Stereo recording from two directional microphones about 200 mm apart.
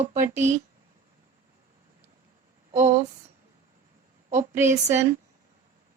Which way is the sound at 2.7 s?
35° right (ahead or behind).